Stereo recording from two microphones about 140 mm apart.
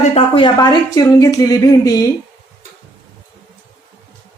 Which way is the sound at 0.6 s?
25° left (ahead or behind).